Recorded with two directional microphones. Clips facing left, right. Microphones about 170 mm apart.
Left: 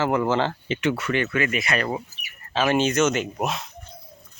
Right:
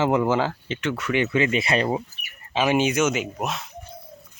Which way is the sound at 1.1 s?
20° right (ahead or behind).